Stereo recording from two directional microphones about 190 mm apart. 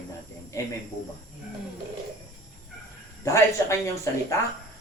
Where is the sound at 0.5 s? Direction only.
15° left (ahead or behind).